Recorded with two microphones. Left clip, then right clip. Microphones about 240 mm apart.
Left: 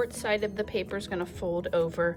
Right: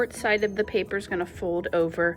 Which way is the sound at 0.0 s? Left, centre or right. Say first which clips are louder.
Right 4 dB; centre.